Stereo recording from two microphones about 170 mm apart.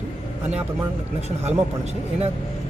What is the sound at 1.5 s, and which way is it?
Speech, 40° right (ahead or behind).